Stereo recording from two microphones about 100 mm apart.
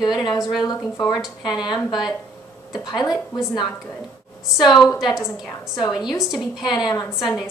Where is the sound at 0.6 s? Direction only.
40° left (ahead or behind).